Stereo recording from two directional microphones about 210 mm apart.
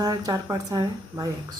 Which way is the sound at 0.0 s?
15° right (ahead or behind).